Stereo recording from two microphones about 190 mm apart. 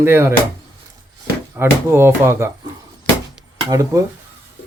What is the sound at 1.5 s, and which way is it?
Speech, 10° right (ahead or behind).